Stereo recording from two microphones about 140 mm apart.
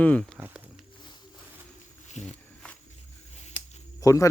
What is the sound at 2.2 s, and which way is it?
Speech, 55° left (ahead or behind).